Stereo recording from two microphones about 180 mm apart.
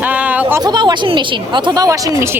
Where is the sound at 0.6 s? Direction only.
25° right (ahead or behind).